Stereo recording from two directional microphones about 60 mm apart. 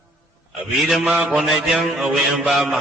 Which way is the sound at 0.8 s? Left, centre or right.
Centre.